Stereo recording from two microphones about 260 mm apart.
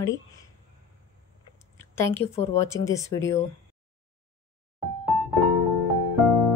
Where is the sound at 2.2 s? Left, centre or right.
Left.